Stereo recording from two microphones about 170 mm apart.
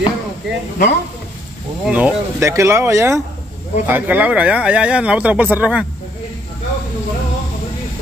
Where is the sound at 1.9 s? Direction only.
10° right (ahead or behind).